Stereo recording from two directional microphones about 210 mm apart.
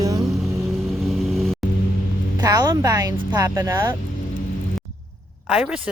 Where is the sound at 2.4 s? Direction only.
15° right (ahead or behind).